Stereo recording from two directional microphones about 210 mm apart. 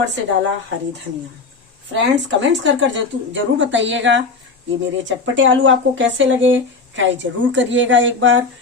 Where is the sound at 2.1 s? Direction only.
60° right (ahead or behind).